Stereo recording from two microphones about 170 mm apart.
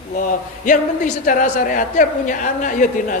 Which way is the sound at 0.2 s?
50° left (ahead or behind).